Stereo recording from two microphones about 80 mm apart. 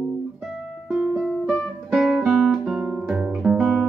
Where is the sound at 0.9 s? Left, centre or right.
Centre.